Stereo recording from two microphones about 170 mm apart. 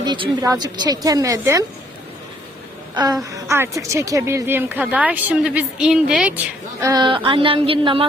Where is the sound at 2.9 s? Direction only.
25° right (ahead or behind).